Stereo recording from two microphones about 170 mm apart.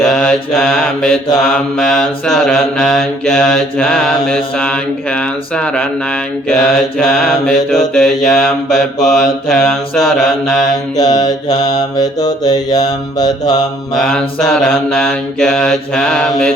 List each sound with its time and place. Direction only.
0.0 s mantra: 5° left (ahead or behind)
10.9 s mantra: 25° left (ahead or behind)
13.9 s mantra: centre (ahead or behind)